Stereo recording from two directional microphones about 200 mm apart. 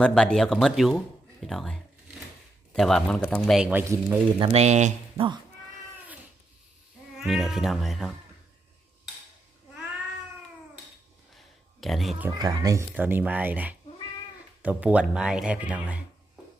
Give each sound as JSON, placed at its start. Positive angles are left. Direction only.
{"t": 0.0, "sound": "a man's voice", "side_deg": 5}
{"t": 4.4, "sound": "speech", "side_deg": -30}
{"t": 7.2, "sound": "a man's voice", "side_deg": 0}
{"t": 11.3, "sound": "a sound", "side_deg": 0}
{"t": 12.4, "sound": "a man's voice", "side_deg": -15}